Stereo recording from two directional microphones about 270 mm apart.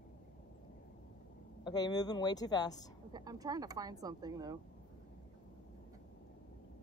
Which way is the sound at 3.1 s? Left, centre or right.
Centre.